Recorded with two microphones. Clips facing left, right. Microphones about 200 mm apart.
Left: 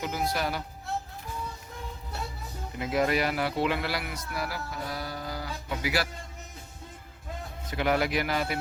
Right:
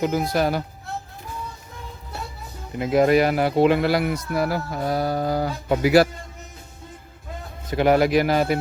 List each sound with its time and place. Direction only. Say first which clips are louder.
0.0 s speech: right 9 dB; 45° right (ahead or behind)
2.7 s speech: right 9 dB; 45° right (ahead or behind)
7.7 s speech: right 9 dB; 40° right (ahead or behind)